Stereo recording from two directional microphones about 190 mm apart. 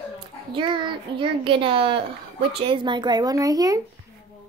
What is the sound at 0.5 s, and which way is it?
A child's voice, 25° right (ahead or behind).